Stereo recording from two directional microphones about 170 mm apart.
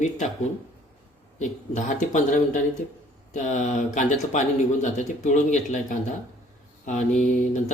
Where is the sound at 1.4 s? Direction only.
45° left (ahead or behind).